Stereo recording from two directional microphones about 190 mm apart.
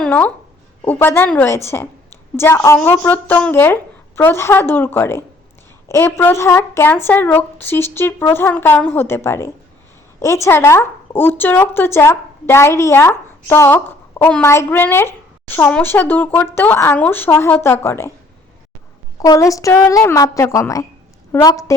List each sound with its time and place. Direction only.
0.0 s speech: 10° left (ahead or behind)
19.2 s speech: 20° left (ahead or behind)